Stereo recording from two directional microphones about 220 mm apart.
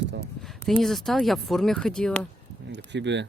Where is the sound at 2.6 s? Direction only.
50° right (ahead or behind).